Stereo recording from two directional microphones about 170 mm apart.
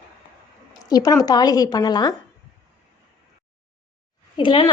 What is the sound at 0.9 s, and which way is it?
A woman's voice, 20° left (ahead or behind).